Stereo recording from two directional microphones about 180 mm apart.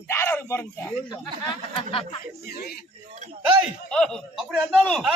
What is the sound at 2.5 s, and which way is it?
Speech, 60° left (ahead or behind).